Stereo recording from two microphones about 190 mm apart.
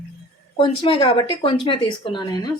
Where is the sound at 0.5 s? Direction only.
25° left (ahead or behind).